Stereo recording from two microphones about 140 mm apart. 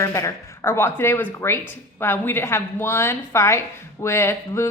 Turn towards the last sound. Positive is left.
turn(degrees=20)  # may be behind; listen again after turning